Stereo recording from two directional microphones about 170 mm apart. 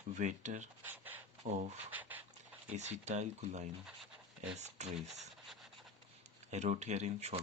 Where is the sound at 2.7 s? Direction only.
45° right (ahead or behind).